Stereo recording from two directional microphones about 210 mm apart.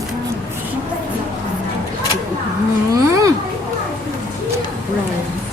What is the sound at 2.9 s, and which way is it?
Babbling, 15° right (ahead or behind).